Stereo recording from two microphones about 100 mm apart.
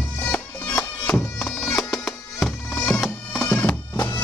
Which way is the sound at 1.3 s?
Centre (ahead or behind).